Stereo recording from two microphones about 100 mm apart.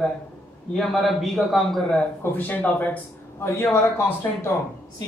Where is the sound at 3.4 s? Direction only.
30° left (ahead or behind).